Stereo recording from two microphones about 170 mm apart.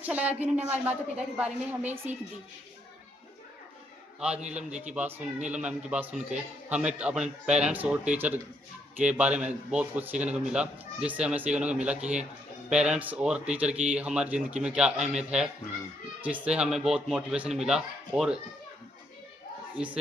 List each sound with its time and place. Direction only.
0.0 s a man's voice: 10° right (ahead or behind)
4.4 s a man's voice: 45° right (ahead or behind)
4.9 s a man's voice: 10° right (ahead or behind)
19.7 s a man's voice: 5° right (ahead or behind)